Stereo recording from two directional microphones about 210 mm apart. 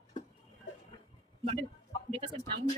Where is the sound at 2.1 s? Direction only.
30° right (ahead or behind).